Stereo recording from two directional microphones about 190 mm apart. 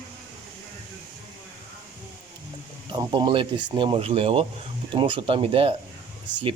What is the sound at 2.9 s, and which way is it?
Speech, 20° right (ahead or behind).